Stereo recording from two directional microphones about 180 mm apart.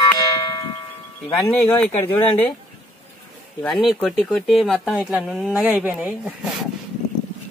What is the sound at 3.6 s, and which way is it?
Speech, centre (ahead or behind).